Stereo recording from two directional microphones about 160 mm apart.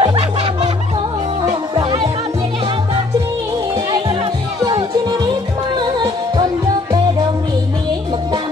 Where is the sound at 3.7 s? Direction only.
30° right (ahead or behind).